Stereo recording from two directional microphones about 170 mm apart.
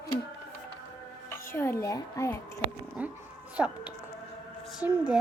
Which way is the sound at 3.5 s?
10° right (ahead or behind).